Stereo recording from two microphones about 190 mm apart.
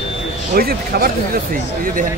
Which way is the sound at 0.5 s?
55° right (ahead or behind).